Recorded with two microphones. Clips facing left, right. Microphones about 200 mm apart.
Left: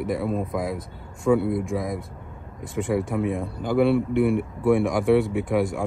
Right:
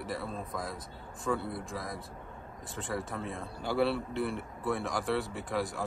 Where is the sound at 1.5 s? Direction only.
Centre (ahead or behind).